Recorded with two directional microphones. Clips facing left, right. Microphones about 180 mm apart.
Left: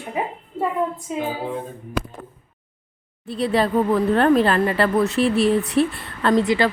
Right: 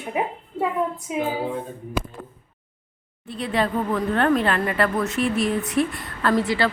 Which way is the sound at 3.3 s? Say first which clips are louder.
Left 4 dB; 35° left (ahead or behind).